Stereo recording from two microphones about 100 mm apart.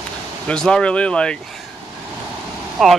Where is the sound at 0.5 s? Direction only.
5° left (ahead or behind).